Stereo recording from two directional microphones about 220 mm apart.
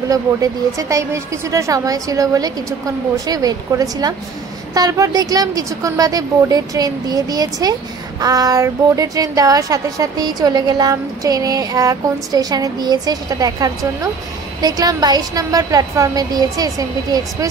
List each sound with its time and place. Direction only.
0.1 s a woman's voice: 15° right (ahead or behind)